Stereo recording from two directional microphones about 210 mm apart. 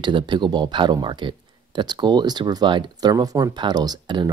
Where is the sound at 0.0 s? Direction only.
20° right (ahead or behind).